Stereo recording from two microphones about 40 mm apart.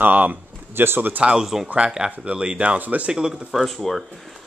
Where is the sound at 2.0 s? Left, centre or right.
Right.